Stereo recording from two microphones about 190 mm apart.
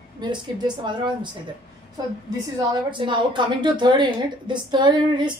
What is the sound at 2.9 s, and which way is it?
Speech, 25° right (ahead or behind).